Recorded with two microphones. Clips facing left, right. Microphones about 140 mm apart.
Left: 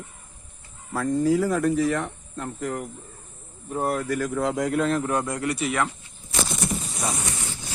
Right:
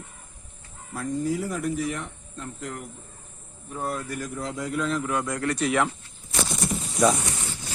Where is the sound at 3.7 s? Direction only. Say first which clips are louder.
Left 5 dB; 55° left (ahead or behind).